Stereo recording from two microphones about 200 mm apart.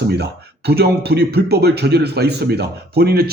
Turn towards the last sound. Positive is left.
turn(degrees=-50)  # may be behind; listen again after turning